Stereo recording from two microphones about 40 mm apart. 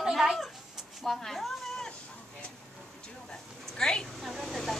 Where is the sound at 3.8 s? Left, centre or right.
Centre.